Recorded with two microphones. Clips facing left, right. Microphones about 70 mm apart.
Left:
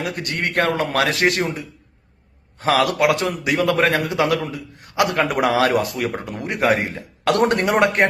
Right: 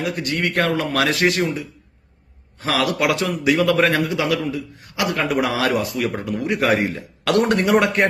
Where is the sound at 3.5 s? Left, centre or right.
Centre.